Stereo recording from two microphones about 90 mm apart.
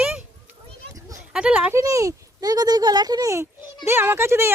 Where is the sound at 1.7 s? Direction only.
35° right (ahead or behind).